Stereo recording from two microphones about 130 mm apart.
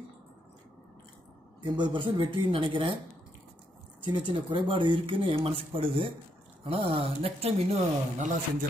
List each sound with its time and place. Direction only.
1.6 s speech: 40° right (ahead or behind)
4.3 s speech: 40° right (ahead or behind); by 8.4 s 60° right (ahead or behind)